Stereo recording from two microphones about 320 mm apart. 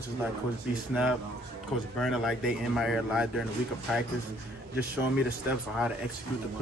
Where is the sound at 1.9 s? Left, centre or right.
Centre.